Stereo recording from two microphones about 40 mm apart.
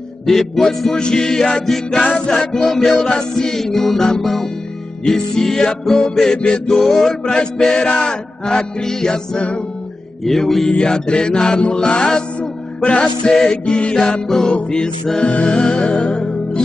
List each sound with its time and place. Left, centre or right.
0.3 s music: centre
2.1 s music: left
2.5 s music: centre
3.1 s music: left
6.8 s music: centre
7.3 s music: left
10.8 s music: left
16.2 s music: centre